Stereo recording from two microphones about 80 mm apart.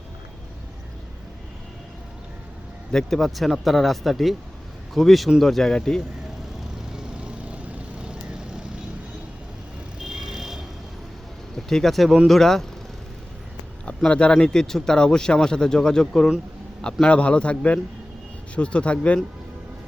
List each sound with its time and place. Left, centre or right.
2.9 s speech: centre
6.9 s vehicle: centre
10.0 s vehicle: centre
11.5 s speech: centre
13.8 s speech: centre